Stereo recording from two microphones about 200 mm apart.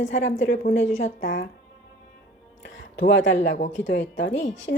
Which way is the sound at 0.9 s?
35° left (ahead or behind).